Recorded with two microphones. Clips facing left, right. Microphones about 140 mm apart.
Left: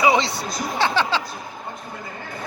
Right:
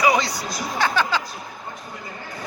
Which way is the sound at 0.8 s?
25° left (ahead or behind).